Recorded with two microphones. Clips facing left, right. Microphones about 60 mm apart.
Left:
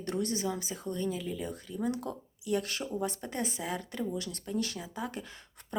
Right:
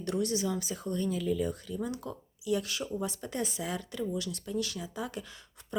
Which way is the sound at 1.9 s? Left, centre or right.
Left.